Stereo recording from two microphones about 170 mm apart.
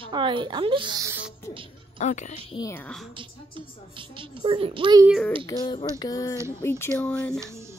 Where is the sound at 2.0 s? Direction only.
45° left (ahead or behind).